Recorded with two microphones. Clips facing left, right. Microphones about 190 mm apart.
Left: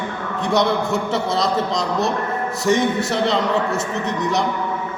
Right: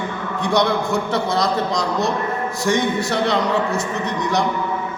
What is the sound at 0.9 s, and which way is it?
Speech, 25° left (ahead or behind).